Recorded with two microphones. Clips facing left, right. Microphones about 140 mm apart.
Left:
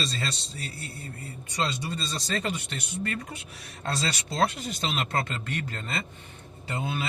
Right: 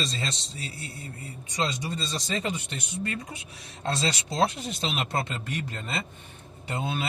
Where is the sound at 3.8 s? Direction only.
25° right (ahead or behind).